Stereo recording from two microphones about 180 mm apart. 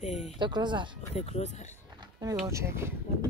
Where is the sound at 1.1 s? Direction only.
35° left (ahead or behind).